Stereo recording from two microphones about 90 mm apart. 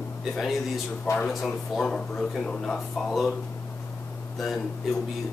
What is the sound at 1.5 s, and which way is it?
Speech, 10° left (ahead or behind).